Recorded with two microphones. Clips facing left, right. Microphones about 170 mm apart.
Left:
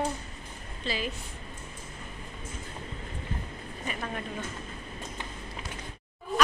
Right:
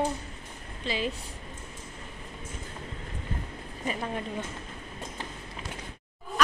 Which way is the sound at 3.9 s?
25° right (ahead or behind).